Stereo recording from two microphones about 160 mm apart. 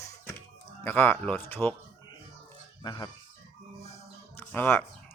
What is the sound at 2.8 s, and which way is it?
Speech, 25° left (ahead or behind).